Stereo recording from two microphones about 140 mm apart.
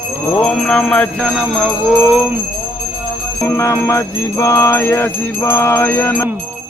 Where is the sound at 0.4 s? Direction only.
5° left (ahead or behind).